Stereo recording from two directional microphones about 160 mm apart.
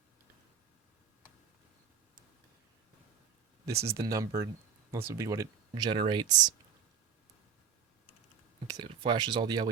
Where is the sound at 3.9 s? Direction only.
20° right (ahead or behind).